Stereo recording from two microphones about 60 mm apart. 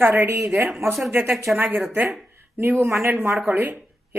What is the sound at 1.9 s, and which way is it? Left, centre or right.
A woman's voice, right.